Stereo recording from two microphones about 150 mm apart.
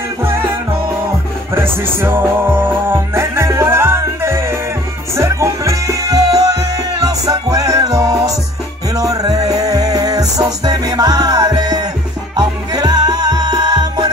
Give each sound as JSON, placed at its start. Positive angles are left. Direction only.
{"t": 1.5, "sound": "music", "side_deg": -15}